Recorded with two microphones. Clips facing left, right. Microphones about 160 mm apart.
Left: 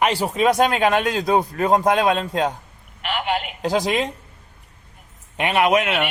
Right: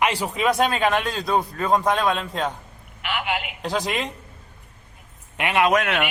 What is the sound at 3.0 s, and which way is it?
Telephone, 35° left (ahead or behind).